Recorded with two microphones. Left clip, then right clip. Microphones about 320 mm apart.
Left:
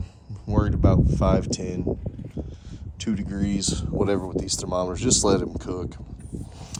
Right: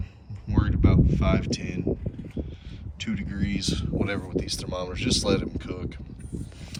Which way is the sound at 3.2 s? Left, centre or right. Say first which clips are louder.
Left 2 dB; left.